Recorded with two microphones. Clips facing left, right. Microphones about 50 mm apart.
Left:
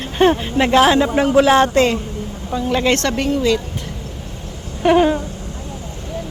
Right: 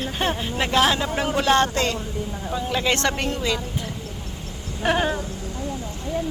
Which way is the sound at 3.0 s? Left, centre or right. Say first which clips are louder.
Left 4 dB; centre.